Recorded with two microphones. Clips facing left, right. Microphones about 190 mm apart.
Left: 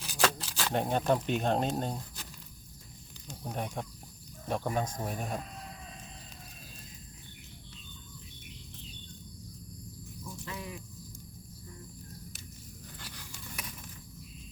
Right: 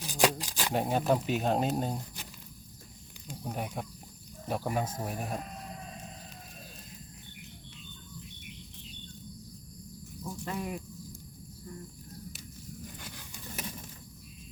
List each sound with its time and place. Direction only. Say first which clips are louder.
0.1 s speech: right 3 dB; 15° right (ahead or behind)
3.2 s speech: right 1 dB; 10° right (ahead or behind)
10.4 s a sound: right 7 dB; 50° right (ahead or behind)
13.0 s biting: right 2 dB; 15° right (ahead or behind)